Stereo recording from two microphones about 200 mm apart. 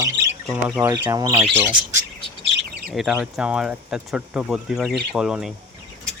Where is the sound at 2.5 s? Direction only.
50° right (ahead or behind).